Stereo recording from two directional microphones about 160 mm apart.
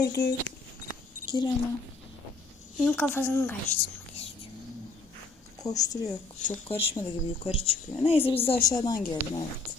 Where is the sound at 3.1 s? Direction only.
15° left (ahead or behind).